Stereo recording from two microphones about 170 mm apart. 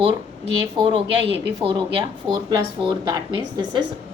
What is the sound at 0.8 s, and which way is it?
Speech, 30° right (ahead or behind).